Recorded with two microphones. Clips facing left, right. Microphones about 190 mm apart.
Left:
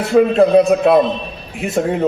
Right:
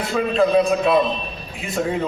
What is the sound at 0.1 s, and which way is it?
Speech, 60° left (ahead or behind).